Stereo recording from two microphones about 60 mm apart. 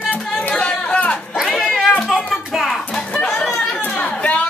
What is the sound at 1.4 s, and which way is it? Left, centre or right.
Cat, centre.